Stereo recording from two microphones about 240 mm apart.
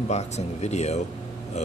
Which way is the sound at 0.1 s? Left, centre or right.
Left.